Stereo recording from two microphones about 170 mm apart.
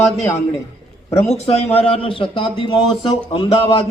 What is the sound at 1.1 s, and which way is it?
A man's voice, 40° left (ahead or behind).